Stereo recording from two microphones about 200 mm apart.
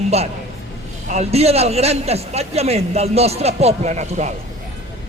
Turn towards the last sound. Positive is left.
turn(degrees=-35)  # may be behind; listen again after turning